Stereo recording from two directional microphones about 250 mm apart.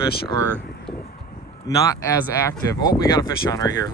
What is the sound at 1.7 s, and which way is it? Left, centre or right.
Speech, centre.